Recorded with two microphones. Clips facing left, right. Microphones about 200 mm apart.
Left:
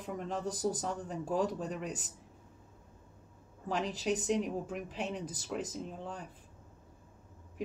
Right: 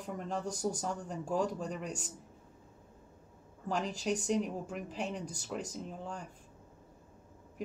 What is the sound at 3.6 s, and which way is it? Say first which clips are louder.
Speech: left 1 dB; centre (ahead or behind).